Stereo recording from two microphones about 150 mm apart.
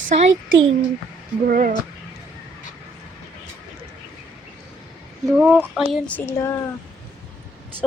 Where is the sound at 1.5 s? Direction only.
65° right (ahead or behind).